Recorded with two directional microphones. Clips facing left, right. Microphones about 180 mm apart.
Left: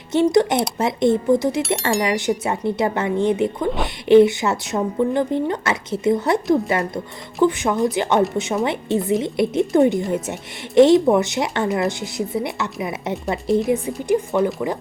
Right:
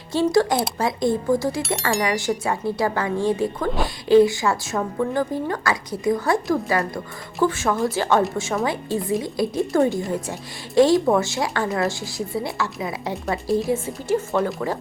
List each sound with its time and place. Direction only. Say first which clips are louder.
0.1 s speech: left 3 dB; 20° left (ahead or behind)